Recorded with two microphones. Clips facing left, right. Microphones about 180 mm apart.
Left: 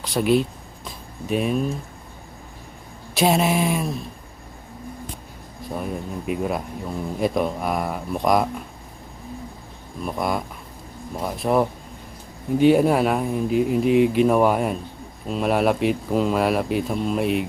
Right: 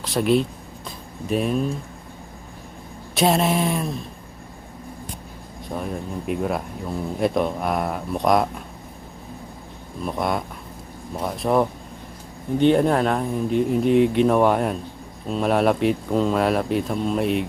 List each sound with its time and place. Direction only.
0.0 s speech: centre (ahead or behind)
3.2 s speech: centre (ahead or behind)
5.6 s speech: centre (ahead or behind)
10.1 s speech: centre (ahead or behind)